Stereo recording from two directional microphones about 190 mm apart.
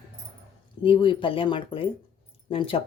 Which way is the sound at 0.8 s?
25° left (ahead or behind).